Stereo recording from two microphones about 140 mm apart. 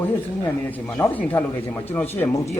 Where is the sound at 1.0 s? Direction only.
10° left (ahead or behind).